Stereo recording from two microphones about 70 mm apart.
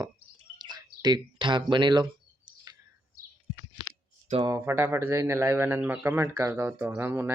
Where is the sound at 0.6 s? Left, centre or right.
Right.